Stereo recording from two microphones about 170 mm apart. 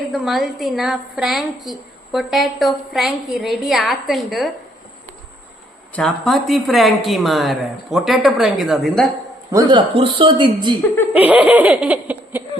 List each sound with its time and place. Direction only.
0.1 s a woman's voice: centre (ahead or behind)
6.0 s a woman's voice: centre (ahead or behind)
9.5 s speech: 25° right (ahead or behind)
11.1 s giggle: 10° right (ahead or behind)